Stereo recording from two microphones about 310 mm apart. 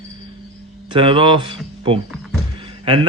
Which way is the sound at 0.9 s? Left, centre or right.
Centre.